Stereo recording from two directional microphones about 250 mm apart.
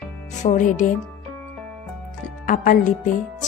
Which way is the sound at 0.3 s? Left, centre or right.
Left.